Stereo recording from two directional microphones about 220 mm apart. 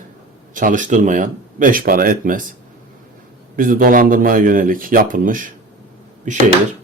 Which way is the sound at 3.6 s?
40° right (ahead or behind).